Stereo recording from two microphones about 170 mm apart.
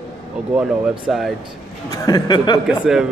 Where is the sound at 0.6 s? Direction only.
5° right (ahead or behind).